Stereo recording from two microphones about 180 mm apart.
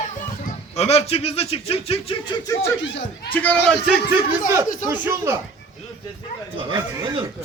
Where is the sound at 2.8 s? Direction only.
85° left.